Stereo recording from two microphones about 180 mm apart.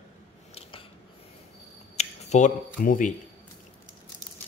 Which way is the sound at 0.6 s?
30° left (ahead or behind).